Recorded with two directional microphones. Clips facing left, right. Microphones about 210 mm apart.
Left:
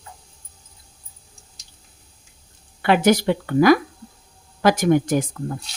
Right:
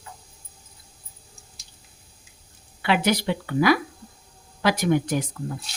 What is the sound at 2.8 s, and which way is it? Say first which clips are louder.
Speech: left 6 dB; 45° left (ahead or behind).